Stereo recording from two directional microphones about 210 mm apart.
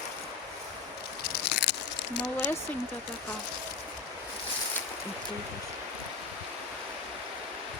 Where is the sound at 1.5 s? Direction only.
55° left (ahead or behind).